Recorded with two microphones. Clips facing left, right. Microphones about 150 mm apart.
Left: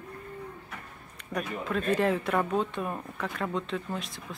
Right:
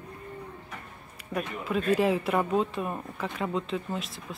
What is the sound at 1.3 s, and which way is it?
Speech, 5° right (ahead or behind).